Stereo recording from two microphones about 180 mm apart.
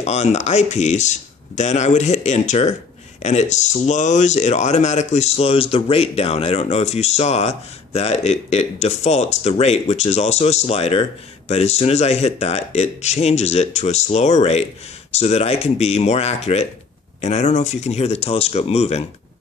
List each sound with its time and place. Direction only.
0.0 s speech: 40° left (ahead or behind)